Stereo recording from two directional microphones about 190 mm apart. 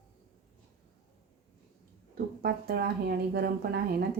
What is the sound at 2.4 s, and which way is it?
Speech, 55° right (ahead or behind).